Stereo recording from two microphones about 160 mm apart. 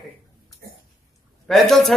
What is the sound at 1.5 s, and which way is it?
Speech, centre (ahead or behind).